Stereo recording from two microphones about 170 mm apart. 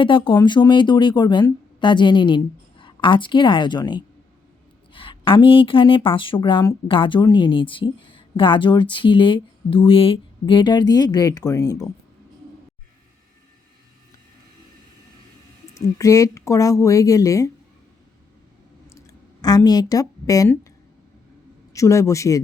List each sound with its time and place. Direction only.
0.0 s speech: 30° left (ahead or behind)
15.7 s speech: 20° left (ahead or behind)
18.9 s a sound: 20° left (ahead or behind)
21.7 s a man's voice: 20° left (ahead or behind)